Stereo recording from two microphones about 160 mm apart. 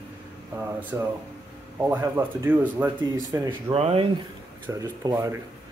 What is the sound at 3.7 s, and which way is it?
Speech, 40° right (ahead or behind).